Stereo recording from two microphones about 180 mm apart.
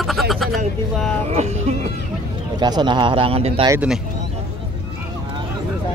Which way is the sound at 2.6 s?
25° right (ahead or behind).